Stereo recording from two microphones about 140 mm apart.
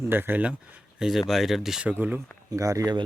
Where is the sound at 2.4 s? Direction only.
25° right (ahead or behind).